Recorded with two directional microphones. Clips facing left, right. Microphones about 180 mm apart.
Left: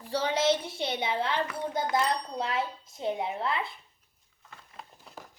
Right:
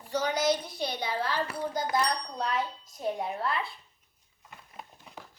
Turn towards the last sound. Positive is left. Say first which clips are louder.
# left 1 dB
turn(degrees=20)  # may be behind; listen again after turning